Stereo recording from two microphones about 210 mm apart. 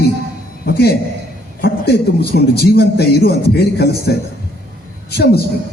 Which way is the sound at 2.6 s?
50° left (ahead or behind).